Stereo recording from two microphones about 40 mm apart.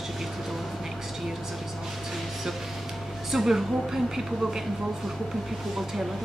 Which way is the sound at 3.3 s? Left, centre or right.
Centre.